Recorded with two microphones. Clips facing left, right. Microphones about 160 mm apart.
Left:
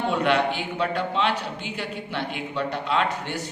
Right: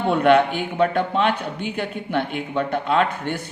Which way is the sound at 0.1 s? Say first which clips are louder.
Right 8 dB; 55° right (ahead or behind).